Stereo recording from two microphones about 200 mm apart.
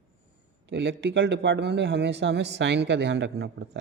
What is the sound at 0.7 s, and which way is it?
Speech, 60° right (ahead or behind).